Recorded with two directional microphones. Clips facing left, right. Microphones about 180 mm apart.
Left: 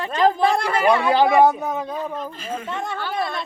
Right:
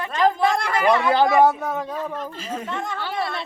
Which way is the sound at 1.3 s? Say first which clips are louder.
Left 1 dB; 15° left (ahead or behind).